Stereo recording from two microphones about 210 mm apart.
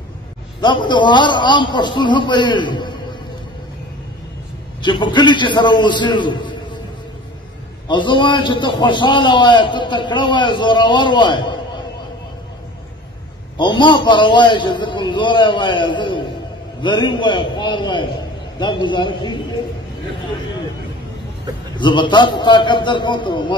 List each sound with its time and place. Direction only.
0.6 s a man's voice: 20° left (ahead or behind)
4.8 s a man's voice: 20° left (ahead or behind)
7.9 s a man's voice: 25° left (ahead or behind)
13.6 s a man's voice: 20° left (ahead or behind)
21.7 s a man's voice: 25° left (ahead or behind)